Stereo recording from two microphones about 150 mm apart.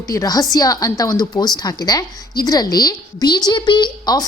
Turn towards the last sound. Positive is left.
turn(degrees=30)  # may be behind; listen again after turning